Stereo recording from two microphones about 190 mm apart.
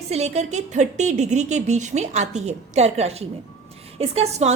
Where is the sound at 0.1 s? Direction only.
35° right (ahead or behind).